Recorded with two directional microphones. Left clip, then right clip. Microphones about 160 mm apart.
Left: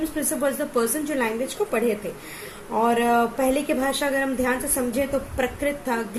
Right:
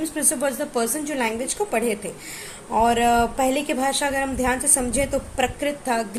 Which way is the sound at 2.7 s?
20° right (ahead or behind).